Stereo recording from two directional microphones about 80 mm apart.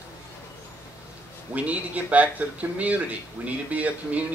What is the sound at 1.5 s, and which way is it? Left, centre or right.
Speech, centre.